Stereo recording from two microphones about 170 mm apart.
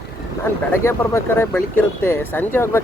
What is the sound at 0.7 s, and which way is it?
Speech, 15° left (ahead or behind).